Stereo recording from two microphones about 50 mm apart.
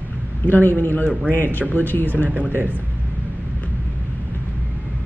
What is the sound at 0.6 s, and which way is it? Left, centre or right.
Speech, left.